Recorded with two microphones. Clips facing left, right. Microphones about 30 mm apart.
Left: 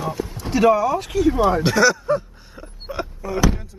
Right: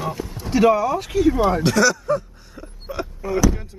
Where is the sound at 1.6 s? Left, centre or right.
Centre.